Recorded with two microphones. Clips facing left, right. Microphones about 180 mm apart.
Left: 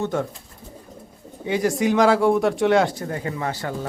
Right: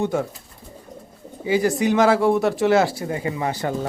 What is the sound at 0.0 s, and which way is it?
Speech, 10° right (ahead or behind).